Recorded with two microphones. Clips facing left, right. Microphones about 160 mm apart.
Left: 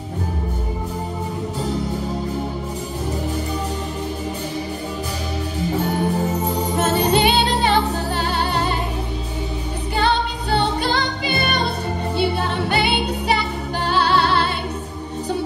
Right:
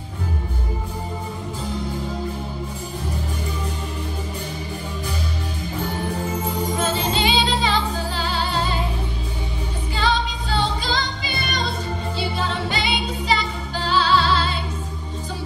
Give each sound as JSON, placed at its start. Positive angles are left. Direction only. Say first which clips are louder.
{"t": 6.8, "sound": "music", "louder": "left 7 dB", "side_deg": 65}
{"t": 9.9, "sound": "music", "louder": "left 3 dB", "side_deg": 60}